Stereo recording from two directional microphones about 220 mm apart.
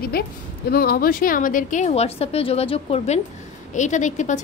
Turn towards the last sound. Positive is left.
turn(degrees=35)  # may be behind; listen again after turning